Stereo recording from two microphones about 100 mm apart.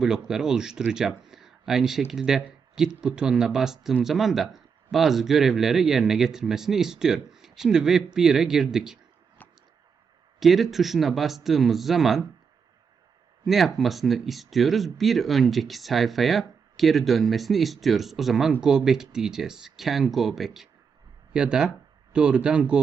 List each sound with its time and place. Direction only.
0.0 s speech: 5° right (ahead or behind)
9.4 s a sound: 15° left (ahead or behind)
10.4 s speech: centre (ahead or behind)
13.4 s speech: centre (ahead or behind)